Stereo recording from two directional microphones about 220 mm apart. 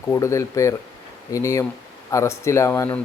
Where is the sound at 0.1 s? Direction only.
15° left (ahead or behind).